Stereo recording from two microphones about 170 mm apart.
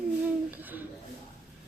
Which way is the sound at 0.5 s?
10° right (ahead or behind).